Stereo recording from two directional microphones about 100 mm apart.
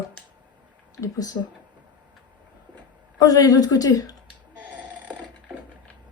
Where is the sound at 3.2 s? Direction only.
40° left (ahead or behind).